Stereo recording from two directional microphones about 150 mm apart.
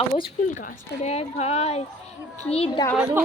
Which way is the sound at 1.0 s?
45° left (ahead or behind).